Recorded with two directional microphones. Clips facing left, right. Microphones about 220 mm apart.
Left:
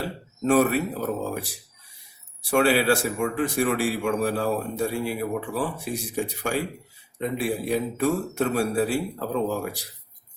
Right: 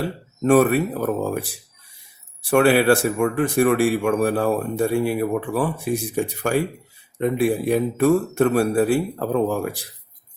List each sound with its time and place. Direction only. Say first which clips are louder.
0.4 s speech: right 4 dB; 55° right (ahead or behind)
2.5 s speech: right 5 dB; 55° right (ahead or behind)